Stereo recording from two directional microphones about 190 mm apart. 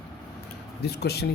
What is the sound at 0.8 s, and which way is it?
Speech, 60° left (ahead or behind).